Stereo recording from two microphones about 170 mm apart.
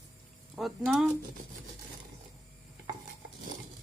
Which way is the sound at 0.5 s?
Centre (ahead or behind).